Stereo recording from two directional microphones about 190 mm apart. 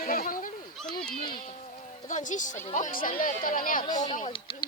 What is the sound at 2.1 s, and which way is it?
Speech, 40° left (ahead or behind).